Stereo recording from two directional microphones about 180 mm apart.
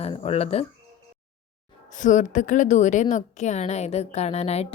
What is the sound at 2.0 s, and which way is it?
A woman's voice, 45° left (ahead or behind).